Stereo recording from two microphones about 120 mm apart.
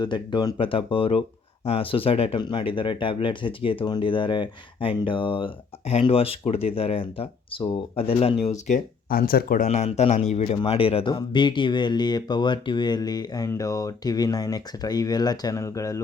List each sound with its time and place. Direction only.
0.0 s speech: 40° left (ahead or behind)
5.9 s speech: 55° left (ahead or behind)
10.7 s speech: 50° left (ahead or behind); by 16.0 s 25° left (ahead or behind)